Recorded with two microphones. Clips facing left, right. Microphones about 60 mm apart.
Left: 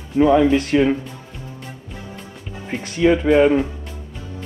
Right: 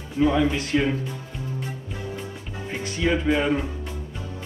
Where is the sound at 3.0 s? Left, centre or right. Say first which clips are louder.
Left 8 dB; left.